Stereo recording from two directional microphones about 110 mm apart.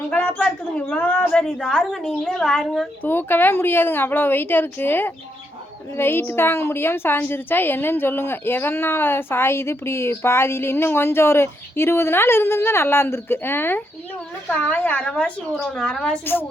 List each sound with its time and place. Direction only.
0.1 s a sound: 15° left (ahead or behind)
0.8 s a woman's voice: 10° left (ahead or behind)
3.0 s a woman's voice: 20° left (ahead or behind)
16.2 s a woman's voice: 20° left (ahead or behind)